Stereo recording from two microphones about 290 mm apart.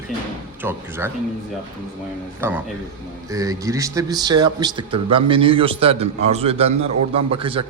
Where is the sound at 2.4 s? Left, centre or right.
Centre.